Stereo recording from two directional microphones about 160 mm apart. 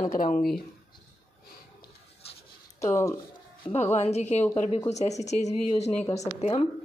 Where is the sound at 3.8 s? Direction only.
45° left (ahead or behind).